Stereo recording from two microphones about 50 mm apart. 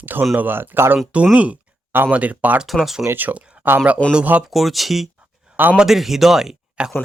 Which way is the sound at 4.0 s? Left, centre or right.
Left.